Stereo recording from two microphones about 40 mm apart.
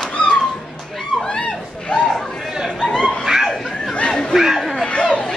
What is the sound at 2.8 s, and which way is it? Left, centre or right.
Dog, centre.